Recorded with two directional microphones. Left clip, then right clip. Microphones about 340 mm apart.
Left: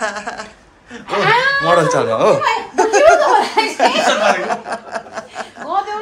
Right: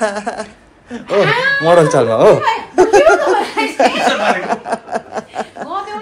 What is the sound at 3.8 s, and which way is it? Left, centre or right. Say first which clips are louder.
Chuckle: right 2 dB; centre.